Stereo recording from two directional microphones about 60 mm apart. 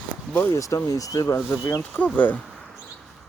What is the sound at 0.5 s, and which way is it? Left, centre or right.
Speech, left.